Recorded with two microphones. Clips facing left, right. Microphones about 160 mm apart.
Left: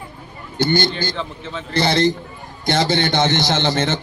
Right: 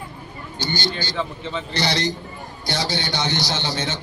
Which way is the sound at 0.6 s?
55° left (ahead or behind).